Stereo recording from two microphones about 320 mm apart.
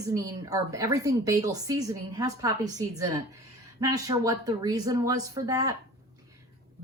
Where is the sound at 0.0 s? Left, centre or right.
Centre.